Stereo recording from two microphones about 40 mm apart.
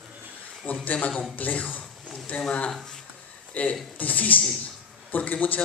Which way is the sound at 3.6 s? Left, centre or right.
Left.